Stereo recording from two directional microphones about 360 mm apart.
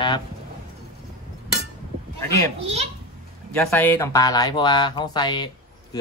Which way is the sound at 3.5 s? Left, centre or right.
Centre.